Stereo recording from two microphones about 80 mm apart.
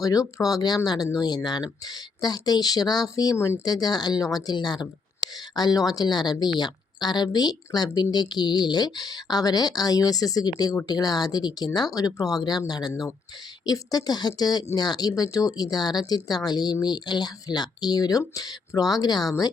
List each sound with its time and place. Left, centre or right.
0.0 s speech: left
3.3 s speech: left
3.6 s speech: left